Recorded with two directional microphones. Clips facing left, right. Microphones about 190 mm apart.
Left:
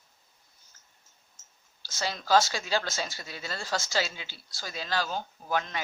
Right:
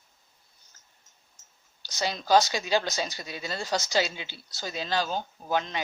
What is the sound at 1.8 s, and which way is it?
Speech, 20° right (ahead or behind).